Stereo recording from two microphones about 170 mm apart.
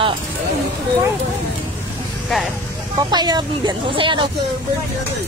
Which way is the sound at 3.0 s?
25° right (ahead or behind).